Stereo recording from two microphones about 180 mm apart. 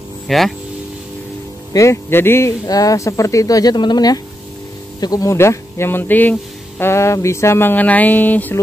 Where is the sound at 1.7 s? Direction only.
15° left (ahead or behind).